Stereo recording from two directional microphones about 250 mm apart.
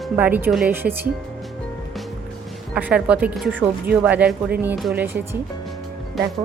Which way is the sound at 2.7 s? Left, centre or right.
Centre.